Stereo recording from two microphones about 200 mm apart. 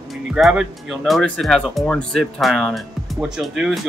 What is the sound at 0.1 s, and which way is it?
Speech, centre (ahead or behind).